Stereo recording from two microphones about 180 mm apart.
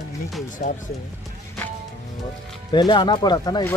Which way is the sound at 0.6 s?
40° left (ahead or behind).